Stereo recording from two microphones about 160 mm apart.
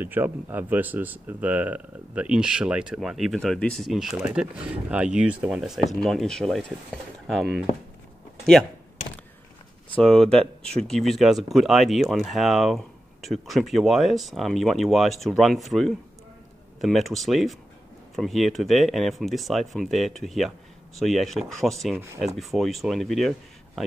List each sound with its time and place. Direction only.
0.0 s speech: 10° right (ahead or behind); by 6.6 s 5° left (ahead or behind)
9.9 s speech: 5° left (ahead or behind)
21.9 s speech: 15° right (ahead or behind)
22.2 s speech: centre (ahead or behind)